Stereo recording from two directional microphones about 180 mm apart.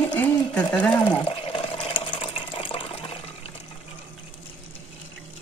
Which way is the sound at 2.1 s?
25° left (ahead or behind).